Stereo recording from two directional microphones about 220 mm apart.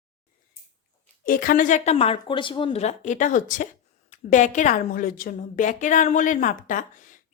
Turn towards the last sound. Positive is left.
turn(degrees=35)  # may be behind; listen again after turning